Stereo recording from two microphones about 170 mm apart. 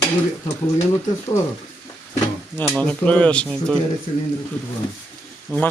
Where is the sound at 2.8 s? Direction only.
10° left (ahead or behind).